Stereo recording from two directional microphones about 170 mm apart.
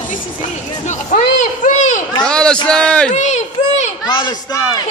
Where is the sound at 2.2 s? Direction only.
5° left (ahead or behind).